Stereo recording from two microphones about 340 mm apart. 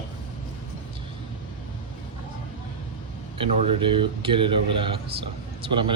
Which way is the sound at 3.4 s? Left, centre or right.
Centre.